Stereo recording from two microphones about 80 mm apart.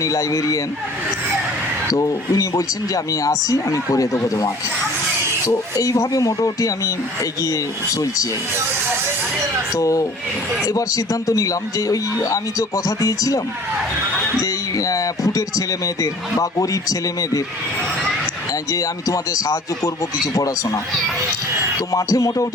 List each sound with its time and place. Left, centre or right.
0.0 s speech: left
1.9 s speech: left
5.7 s speech: left
9.7 s speech: left
14.4 s speech: left
18.7 s speech: left
21.9 s speech: left